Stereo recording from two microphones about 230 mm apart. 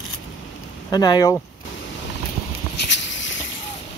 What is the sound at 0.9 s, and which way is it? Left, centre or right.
Speech, centre.